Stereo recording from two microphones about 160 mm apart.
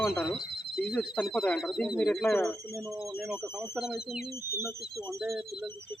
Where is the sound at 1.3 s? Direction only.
Centre (ahead or behind).